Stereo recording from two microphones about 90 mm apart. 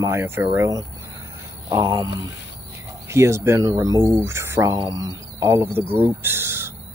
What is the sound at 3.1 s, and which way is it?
Speech, 30° right (ahead or behind).